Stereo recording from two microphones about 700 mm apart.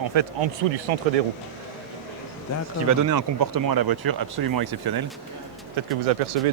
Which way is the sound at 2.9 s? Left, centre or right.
Right.